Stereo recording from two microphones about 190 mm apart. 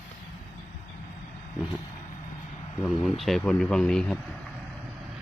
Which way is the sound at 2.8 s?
5° left (ahead or behind).